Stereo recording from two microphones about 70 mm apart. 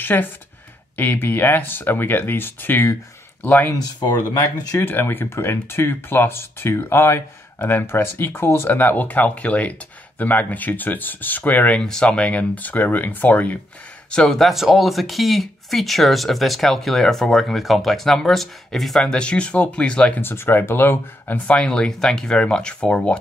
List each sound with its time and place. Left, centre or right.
0.0 s speech: left
4.0 s speech: left
4.7 s speech: left
11.8 s speech: centre
14.1 s speech: centre
20.2 s speech: left
21.5 s speech: centre